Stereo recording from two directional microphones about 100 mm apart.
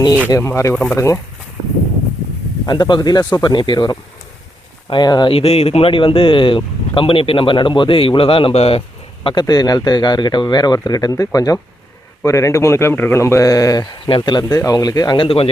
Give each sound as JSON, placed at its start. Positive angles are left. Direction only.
{"t": 0.3, "sound": "speech", "side_deg": 30}
{"t": 0.7, "sound": "speech", "side_deg": 10}
{"t": 0.9, "sound": "speech", "side_deg": 30}
{"t": 2.6, "sound": "speech", "side_deg": 45}
{"t": 5.3, "sound": "a man's voice", "side_deg": 80}
{"t": 9.2, "sound": "speech", "side_deg": 45}
{"t": 15.2, "sound": "a man's voice", "side_deg": 65}